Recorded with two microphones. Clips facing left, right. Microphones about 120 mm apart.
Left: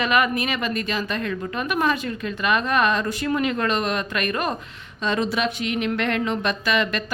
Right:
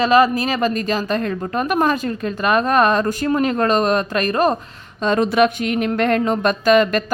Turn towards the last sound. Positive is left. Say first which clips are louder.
# right 9 dB
turn(degrees=-45)  # may be behind; listen again after turning